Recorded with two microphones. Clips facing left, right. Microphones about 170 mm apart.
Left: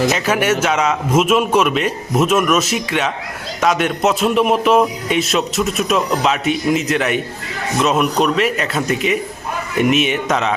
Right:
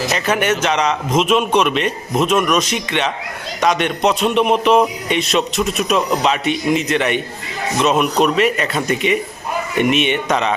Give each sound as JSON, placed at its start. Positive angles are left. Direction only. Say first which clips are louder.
{"t": 0.1, "sound": "speech", "louder": "left 1 dB", "side_deg": 5}